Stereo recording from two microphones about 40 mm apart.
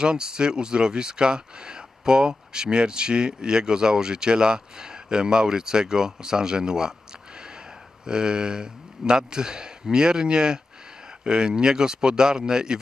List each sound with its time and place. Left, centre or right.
0.0 s speech: centre